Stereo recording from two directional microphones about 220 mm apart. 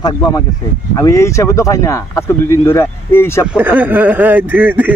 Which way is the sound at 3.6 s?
10° right (ahead or behind).